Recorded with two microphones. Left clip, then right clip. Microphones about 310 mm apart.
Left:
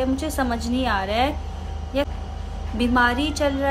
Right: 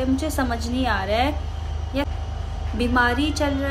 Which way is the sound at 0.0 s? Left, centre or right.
Centre.